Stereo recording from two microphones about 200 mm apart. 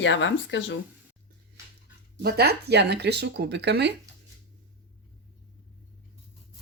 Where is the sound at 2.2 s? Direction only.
50° right (ahead or behind).